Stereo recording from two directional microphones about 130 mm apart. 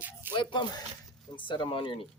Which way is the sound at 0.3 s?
35° left (ahead or behind).